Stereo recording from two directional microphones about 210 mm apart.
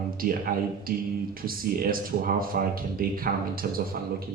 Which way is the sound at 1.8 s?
45° right (ahead or behind).